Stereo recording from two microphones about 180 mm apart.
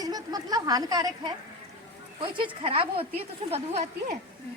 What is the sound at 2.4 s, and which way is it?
Speech, 30° right (ahead or behind).